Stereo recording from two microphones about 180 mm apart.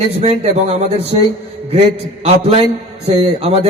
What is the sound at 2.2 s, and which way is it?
A man's voice, 35° right (ahead or behind).